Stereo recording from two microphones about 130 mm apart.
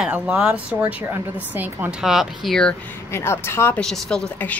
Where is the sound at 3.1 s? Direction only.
20° left (ahead or behind).